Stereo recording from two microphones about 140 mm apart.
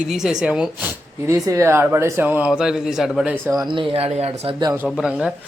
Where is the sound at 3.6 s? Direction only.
35° right (ahead or behind).